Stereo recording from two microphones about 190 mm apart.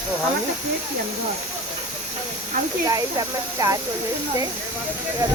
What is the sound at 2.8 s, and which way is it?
Speech, 20° right (ahead or behind).